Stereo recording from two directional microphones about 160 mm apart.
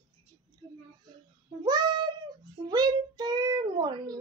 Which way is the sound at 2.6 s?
25° right (ahead or behind).